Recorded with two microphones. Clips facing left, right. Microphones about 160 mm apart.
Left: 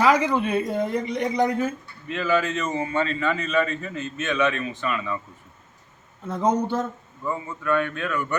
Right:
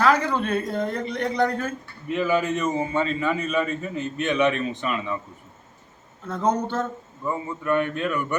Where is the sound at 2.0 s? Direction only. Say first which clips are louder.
Right 1 dB; 15° right (ahead or behind).